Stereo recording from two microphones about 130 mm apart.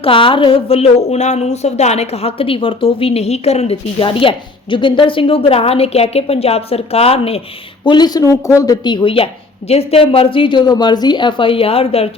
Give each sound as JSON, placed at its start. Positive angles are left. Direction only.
{"t": 0.0, "sound": "a woman's voice", "side_deg": 40}
{"t": 7.9, "sound": "a woman's voice", "side_deg": 35}